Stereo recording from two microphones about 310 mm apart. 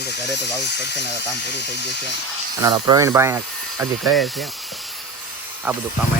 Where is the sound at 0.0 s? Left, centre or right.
Left.